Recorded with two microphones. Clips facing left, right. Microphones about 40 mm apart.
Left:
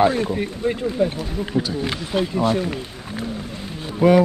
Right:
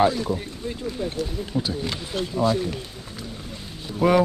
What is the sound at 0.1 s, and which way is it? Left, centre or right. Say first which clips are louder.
Speech: left 5 dB; left.